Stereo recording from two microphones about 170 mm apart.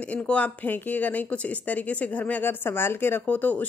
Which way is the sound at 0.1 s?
10° left (ahead or behind).